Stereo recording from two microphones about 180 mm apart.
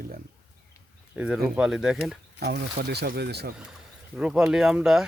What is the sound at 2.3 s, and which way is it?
Speech, 60° right (ahead or behind).